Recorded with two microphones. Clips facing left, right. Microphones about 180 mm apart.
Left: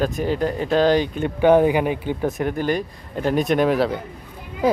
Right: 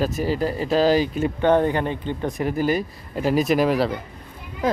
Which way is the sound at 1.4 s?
10° left (ahead or behind).